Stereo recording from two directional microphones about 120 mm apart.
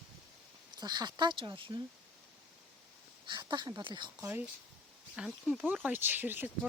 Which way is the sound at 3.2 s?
35° right (ahead or behind).